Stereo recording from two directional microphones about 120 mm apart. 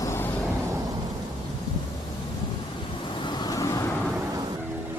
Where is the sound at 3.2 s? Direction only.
40° left (ahead or behind).